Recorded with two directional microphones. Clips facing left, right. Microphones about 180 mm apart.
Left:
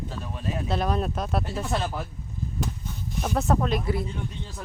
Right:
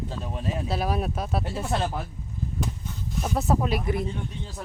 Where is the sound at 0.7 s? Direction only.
5° right (ahead or behind).